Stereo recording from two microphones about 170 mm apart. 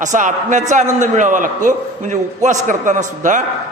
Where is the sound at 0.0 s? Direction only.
45° right (ahead or behind).